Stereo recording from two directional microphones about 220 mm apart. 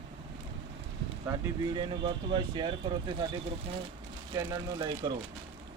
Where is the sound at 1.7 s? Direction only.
20° right (ahead or behind).